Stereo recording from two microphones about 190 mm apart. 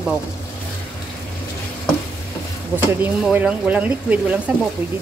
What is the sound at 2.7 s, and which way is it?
A woman's voice, 10° right (ahead or behind).